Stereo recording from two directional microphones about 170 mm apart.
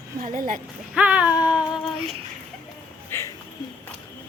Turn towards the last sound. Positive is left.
turn(degrees=15)  # may be behind; listen again after turning